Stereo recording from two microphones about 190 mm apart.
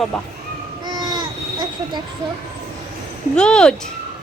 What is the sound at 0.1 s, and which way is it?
Speech, centre (ahead or behind).